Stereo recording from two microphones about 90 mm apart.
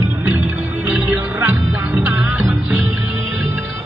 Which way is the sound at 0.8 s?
15° right (ahead or behind).